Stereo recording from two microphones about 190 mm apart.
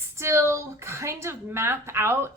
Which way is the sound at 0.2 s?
15° right (ahead or behind).